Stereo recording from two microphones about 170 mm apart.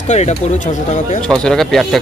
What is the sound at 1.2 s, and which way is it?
Speech, 5° left (ahead or behind).